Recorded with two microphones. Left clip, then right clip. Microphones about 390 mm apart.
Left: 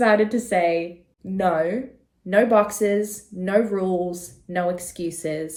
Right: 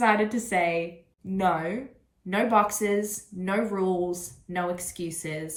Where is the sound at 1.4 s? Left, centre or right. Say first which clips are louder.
Left 5 dB; centre.